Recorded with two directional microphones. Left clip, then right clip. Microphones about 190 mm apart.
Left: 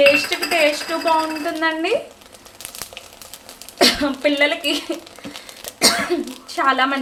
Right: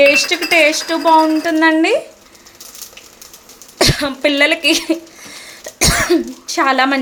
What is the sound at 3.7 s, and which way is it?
Speech, 50° right (ahead or behind).